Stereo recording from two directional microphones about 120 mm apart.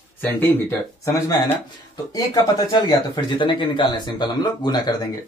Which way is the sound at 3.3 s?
40° left (ahead or behind).